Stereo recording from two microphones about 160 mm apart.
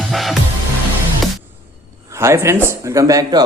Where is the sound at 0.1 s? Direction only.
Centre (ahead or behind).